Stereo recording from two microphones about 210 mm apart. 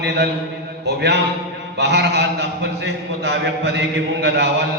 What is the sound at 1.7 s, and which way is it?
A man's voice, 55° right (ahead or behind).